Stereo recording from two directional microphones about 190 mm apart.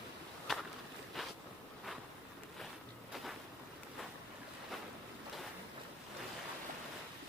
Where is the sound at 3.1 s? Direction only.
Centre (ahead or behind).